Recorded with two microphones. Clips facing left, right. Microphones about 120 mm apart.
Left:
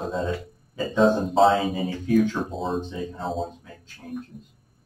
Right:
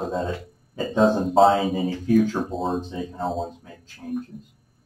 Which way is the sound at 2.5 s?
Centre (ahead or behind).